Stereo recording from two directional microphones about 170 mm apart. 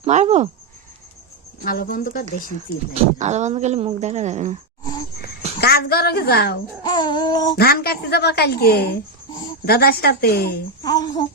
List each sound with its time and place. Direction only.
0.0 s speech: 40° right (ahead or behind)
1.6 s a woman's voice: 55° left (ahead or behind)
2.9 s speech: 45° right (ahead or behind)
5.5 s a woman's voice: 65° left (ahead or behind)
6.8 s baby cry: 25° left (ahead or behind)
7.5 s a woman's voice: 65° left (ahead or behind)
10.8 s baby cry: 20° left (ahead or behind)